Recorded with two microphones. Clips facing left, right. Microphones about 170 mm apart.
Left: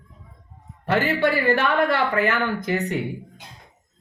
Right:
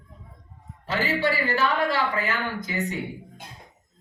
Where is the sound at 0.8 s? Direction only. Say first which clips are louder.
Left 5 dB; 60° left (ahead or behind).